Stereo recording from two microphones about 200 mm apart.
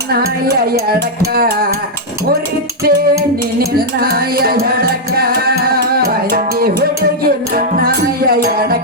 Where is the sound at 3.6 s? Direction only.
50° right (ahead or behind).